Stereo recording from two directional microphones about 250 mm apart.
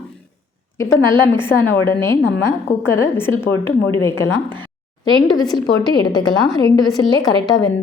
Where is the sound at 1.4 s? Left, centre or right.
Centre.